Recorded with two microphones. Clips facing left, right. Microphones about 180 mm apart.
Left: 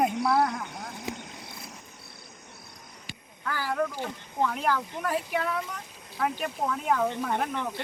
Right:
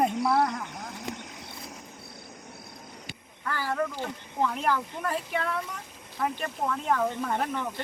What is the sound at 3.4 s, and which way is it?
Speech, centre (ahead or behind).